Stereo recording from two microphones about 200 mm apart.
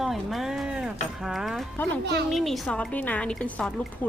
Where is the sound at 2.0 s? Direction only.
55° right (ahead or behind).